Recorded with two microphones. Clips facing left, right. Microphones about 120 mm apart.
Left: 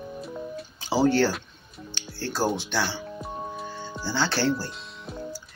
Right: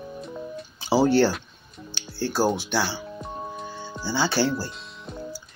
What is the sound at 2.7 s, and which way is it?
Speech, 5° right (ahead or behind).